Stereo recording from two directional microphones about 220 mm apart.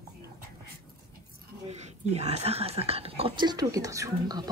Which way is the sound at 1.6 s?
30° right (ahead or behind).